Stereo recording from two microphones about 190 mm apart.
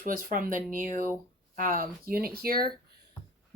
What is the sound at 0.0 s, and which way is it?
Speech, 50° right (ahead or behind).